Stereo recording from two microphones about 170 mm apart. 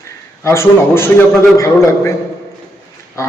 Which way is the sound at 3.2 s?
20° left (ahead or behind).